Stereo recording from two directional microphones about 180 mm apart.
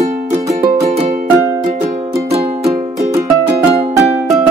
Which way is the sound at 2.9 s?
15° right (ahead or behind).